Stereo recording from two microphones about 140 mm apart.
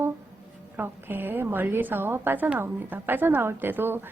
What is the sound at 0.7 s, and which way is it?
A woman's voice, 15° right (ahead or behind).